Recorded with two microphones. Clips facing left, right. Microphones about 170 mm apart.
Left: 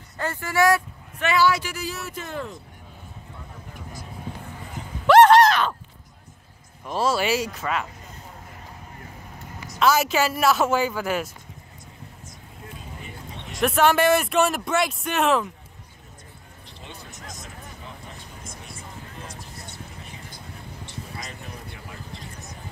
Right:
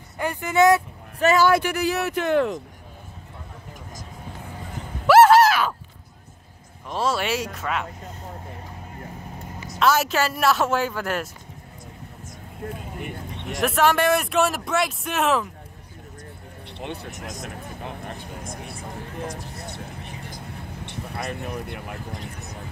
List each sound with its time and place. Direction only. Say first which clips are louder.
0.2 s speech: right 3 dB; 15° right (ahead or behind)
1.2 s speech: right 4 dB; 45° right (ahead or behind); by 2.6 s 70° right (ahead or behind)
5.0 s a sound: even; 5° right (ahead or behind)
6.9 s speech: left 2 dB; 5° left (ahead or behind)
9.8 s speech: even; centre (ahead or behind)
12.7 s a sound: right 6 dB; 55° right (ahead or behind)
13.6 s speech: left 1 dB; centre (ahead or behind)
16.7 s vehicle: right 9 dB; 65° right (ahead or behind)
20.8 s speech: right 7 dB; 60° right (ahead or behind)